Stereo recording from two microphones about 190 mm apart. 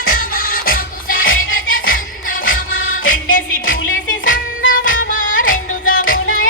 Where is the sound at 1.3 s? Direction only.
90° left.